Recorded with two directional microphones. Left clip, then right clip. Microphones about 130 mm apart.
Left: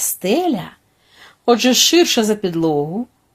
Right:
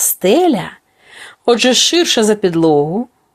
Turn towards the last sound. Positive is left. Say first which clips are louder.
# right 6 dB
turn(degrees=-40)  # may be behind; listen again after turning